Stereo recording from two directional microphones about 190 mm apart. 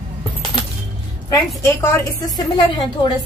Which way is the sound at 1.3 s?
15° left (ahead or behind).